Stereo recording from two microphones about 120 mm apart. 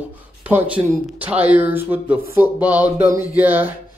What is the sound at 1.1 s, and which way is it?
Speech, 15° right (ahead or behind).